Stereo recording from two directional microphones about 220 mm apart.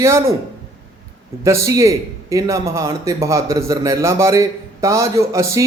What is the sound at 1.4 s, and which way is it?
A man's voice, 15° right (ahead or behind).